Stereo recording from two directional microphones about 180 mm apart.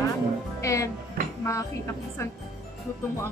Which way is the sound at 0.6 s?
15° left (ahead or behind).